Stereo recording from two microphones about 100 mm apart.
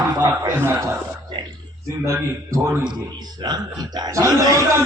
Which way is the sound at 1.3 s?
55° right (ahead or behind).